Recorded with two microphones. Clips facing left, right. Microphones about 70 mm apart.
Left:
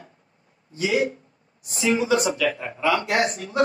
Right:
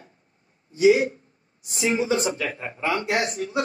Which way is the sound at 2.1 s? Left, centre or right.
Left.